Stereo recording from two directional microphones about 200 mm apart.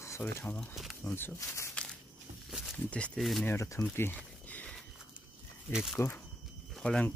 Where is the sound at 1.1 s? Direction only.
10° left (ahead or behind).